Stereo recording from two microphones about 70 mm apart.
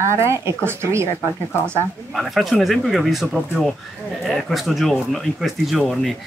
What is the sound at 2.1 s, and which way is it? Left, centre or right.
Speech, centre.